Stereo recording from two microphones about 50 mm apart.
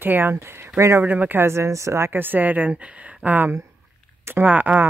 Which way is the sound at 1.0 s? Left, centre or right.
Right.